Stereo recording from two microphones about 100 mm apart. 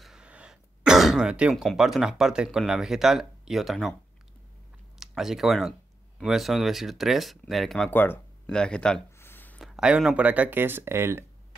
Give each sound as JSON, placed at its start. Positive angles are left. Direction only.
{"t": 0.0, "sound": "throat clearing", "side_deg": -10}
{"t": 1.5, "sound": "speech", "side_deg": 0}
{"t": 4.9, "sound": "speech", "side_deg": -5}
{"t": 7.9, "sound": "speech", "side_deg": 20}
{"t": 8.5, "sound": "speech", "side_deg": 10}
{"t": 9.2, "sound": "a sound", "side_deg": 20}
{"t": 9.6, "sound": "speech", "side_deg": -5}